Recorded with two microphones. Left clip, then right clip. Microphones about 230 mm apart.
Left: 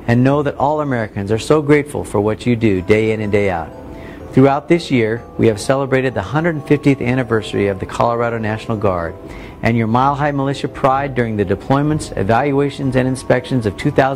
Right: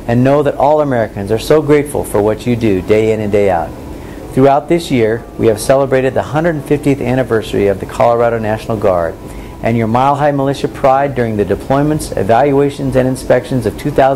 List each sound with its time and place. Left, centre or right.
0.0 s speech: left